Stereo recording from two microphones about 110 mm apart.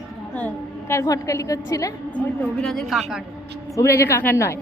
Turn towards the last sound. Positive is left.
turn(degrees=20)  # may be behind; listen again after turning